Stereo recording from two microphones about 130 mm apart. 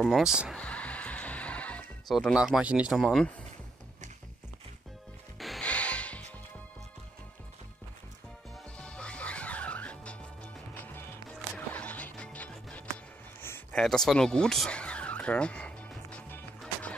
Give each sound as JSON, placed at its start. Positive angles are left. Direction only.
{"t": 0.0, "sound": "speech", "side_deg": -5}
{"t": 0.6, "sound": "music", "side_deg": 10}
{"t": 2.1, "sound": "speech", "side_deg": -5}
{"t": 5.4, "sound": "music", "side_deg": 0}
{"t": 8.7, "sound": "music", "side_deg": 10}
{"t": 13.4, "sound": "a sound", "side_deg": 15}
{"t": 13.7, "sound": "a sound", "side_deg": 5}